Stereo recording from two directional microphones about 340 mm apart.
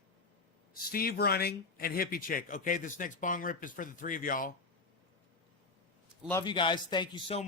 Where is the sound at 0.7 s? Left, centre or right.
Left.